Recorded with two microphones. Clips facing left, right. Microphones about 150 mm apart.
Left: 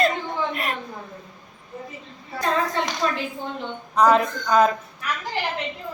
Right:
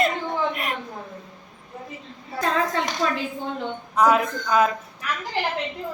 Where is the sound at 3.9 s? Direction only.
5° right (ahead or behind).